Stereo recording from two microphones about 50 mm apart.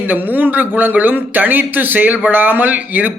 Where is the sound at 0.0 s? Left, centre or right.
Right.